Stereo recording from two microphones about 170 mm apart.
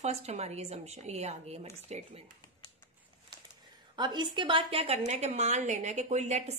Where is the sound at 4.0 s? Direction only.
25° right (ahead or behind).